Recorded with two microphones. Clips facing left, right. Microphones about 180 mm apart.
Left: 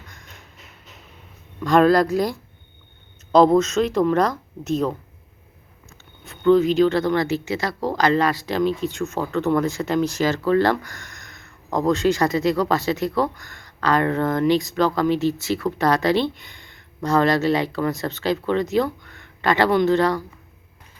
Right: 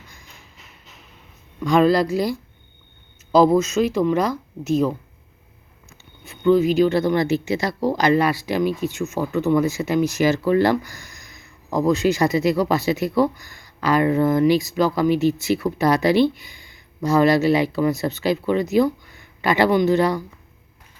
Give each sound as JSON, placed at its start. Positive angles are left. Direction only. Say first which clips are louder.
{"t": 1.8, "sound": "speech", "louder": "left 1 dB", "side_deg": 45}
{"t": 3.3, "sound": "speech", "louder": "even", "side_deg": -5}
{"t": 6.2, "sound": "speech", "louder": "even", "side_deg": -5}